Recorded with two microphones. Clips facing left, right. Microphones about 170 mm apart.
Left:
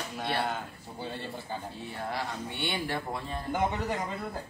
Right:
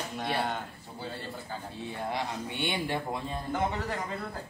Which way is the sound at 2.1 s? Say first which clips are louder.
Right 1 dB; 20° right (ahead or behind).